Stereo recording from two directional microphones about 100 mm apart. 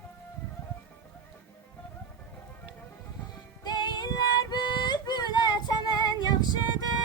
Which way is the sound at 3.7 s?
45° left (ahead or behind).